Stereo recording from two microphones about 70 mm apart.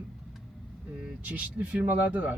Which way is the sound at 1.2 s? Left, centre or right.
Right.